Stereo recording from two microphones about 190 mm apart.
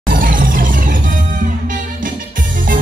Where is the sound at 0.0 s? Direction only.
45° right (ahead or behind).